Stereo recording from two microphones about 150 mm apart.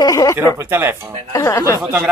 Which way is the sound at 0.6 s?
15° right (ahead or behind).